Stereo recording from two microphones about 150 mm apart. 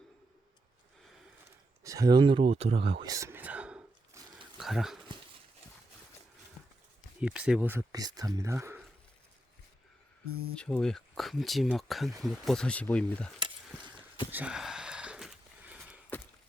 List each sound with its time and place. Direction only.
1.8 s speech: 20° right (ahead or behind); by 3.1 s 40° right (ahead or behind)
3.1 s whispering: 20° right (ahead or behind)
4.5 s a sound: centre (ahead or behind)
7.2 s speech: 5° right (ahead or behind)
7.9 s speech: 25° right (ahead or behind)
10.5 s speech: 5° left (ahead or behind)
14.3 s a sound: 10° right (ahead or behind)